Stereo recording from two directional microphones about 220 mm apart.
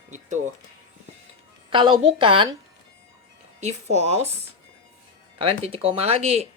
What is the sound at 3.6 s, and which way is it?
Speech, 30° right (ahead or behind).